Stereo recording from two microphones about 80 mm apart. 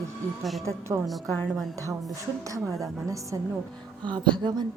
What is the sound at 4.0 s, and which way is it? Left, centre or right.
Music, right.